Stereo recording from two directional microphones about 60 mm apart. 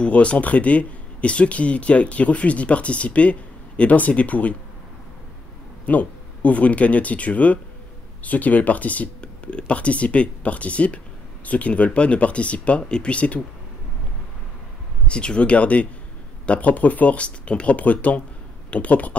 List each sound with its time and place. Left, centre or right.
0.0 s speech: left
5.9 s speech: left
15.0 s speech: centre